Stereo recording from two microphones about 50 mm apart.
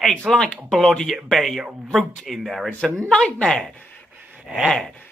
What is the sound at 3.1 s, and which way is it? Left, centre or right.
Speech, centre.